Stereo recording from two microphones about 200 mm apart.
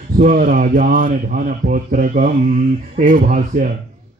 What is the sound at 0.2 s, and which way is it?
A man's voice, 45° right (ahead or behind).